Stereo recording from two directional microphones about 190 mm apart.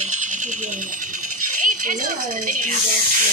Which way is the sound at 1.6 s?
45° right (ahead or behind).